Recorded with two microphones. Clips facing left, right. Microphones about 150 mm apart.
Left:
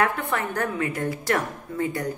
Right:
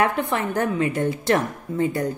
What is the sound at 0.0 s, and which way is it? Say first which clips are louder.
A woman's voice: right 3 dB; 20° right (ahead or behind).